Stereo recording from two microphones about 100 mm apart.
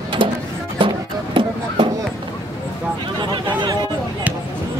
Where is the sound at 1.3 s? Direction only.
55° right (ahead or behind).